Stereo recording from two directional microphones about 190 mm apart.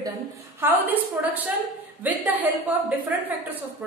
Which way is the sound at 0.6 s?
10° right (ahead or behind).